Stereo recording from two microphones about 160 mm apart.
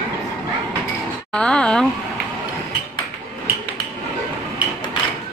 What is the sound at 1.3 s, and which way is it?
Speech, 5° left (ahead or behind).